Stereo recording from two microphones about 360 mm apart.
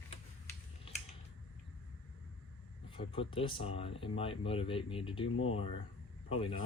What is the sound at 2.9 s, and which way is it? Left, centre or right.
Speech, centre.